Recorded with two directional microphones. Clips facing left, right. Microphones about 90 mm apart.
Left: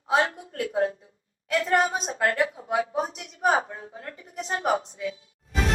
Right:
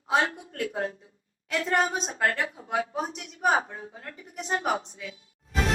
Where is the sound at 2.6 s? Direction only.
35° left (ahead or behind).